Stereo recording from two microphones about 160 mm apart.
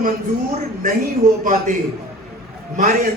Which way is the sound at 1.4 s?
55° right (ahead or behind).